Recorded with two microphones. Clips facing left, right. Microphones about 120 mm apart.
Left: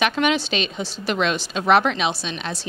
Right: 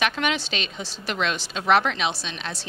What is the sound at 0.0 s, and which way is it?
A woman's voice, 15° left (ahead or behind).